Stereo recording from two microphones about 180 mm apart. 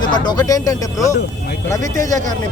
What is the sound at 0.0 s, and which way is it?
Speech, 25° left (ahead or behind).